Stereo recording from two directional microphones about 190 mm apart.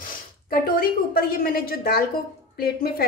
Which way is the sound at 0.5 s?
50° left (ahead or behind).